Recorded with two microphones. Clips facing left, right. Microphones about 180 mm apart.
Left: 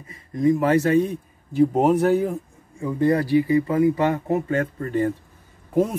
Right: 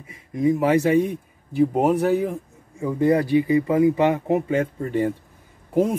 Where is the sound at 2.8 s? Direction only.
15° right (ahead or behind).